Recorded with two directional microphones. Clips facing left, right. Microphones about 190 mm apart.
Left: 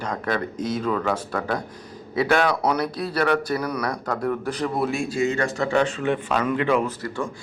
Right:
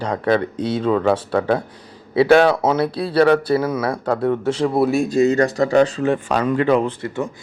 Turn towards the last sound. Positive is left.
turn(degrees=-20)  # may be behind; listen again after turning